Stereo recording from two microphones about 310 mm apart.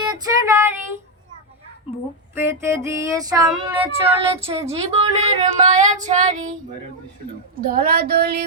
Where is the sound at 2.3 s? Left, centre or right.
Centre; by 6.5 s right.